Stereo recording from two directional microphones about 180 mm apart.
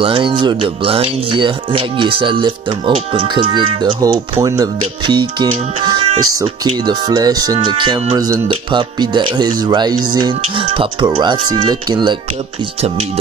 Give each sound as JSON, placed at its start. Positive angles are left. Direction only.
{"t": 0.0, "sound": "speech", "side_deg": -30}